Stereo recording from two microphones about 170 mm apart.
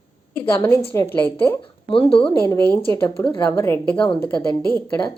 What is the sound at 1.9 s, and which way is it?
Speech, 30° left (ahead or behind).